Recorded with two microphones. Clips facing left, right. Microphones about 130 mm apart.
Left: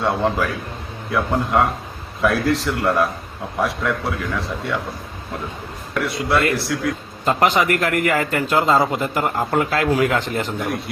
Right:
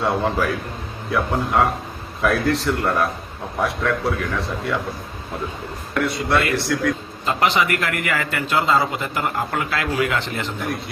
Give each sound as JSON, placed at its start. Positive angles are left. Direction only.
{"t": 0.0, "sound": "a man's voice", "side_deg": 0}
{"t": 5.9, "sound": "a man's voice", "side_deg": 0}
{"t": 7.3, "sound": "a man's voice", "side_deg": 45}